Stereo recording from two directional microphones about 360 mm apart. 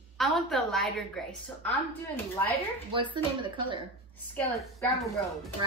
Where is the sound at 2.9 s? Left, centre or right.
Centre.